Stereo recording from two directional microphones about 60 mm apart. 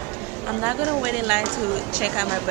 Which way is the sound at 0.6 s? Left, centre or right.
Right.